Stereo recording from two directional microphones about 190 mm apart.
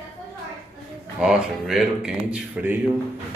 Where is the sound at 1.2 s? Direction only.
5° right (ahead or behind).